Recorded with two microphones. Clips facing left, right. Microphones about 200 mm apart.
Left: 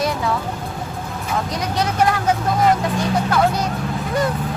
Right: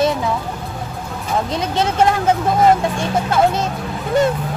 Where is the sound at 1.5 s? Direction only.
25° right (ahead or behind).